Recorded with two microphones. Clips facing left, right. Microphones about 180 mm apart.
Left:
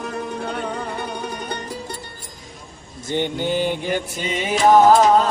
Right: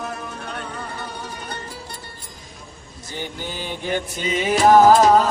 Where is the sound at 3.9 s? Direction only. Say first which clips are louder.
Even; 5° left (ahead or behind).